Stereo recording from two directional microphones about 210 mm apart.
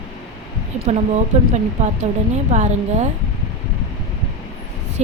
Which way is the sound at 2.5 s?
35° right (ahead or behind).